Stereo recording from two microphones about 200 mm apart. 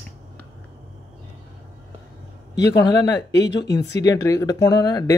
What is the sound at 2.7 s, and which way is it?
Speech, 20° left (ahead or behind).